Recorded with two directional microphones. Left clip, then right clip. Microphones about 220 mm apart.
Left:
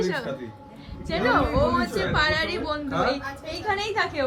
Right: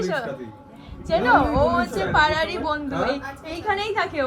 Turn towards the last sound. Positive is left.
turn(degrees=10)  # may be behind; listen again after turning